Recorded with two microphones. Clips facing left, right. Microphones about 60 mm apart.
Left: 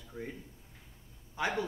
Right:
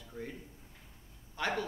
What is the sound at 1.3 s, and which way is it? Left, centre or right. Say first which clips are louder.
Speech: left 1 dB; centre.